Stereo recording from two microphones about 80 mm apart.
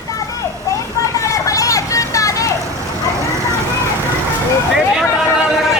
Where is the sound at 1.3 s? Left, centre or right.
Left.